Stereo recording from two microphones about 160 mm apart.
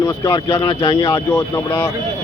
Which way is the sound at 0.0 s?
25° left (ahead or behind).